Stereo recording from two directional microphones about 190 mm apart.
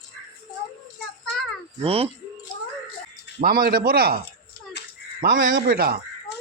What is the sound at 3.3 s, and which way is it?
Speech, 50° right (ahead or behind).